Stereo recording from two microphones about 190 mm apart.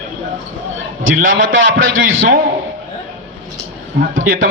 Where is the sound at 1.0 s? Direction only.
90° right.